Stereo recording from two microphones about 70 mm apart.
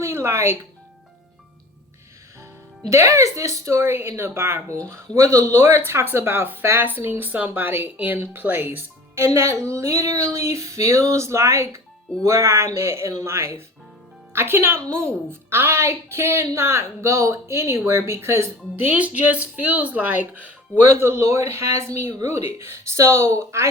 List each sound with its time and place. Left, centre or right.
0.0 s speech: right
2.9 s a woman's voice: right
5.5 s a woman's voice: right
18.8 s speech: right
20.9 s a woman's voice: right